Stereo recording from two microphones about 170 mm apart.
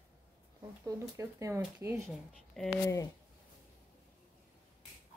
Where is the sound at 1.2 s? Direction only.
20° right (ahead or behind).